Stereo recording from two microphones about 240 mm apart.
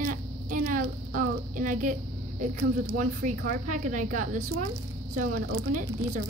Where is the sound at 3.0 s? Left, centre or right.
Right.